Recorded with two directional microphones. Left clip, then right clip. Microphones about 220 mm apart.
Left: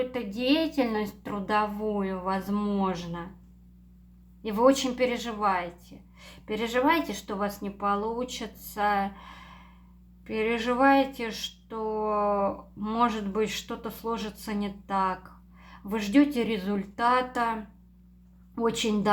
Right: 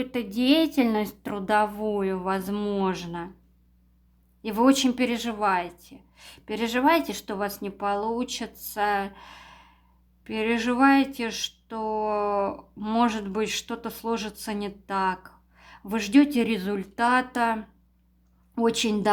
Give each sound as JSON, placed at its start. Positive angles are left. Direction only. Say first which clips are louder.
{"t": 0.0, "sound": "speech", "louder": "right 2 dB", "side_deg": -45}
{"t": 4.4, "sound": "speech", "louder": "right 1 dB", "side_deg": -45}